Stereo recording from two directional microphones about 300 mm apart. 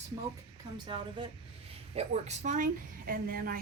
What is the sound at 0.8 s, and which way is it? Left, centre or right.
A woman's voice, centre.